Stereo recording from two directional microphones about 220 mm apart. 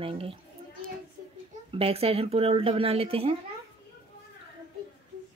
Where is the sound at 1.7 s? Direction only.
25° right (ahead or behind).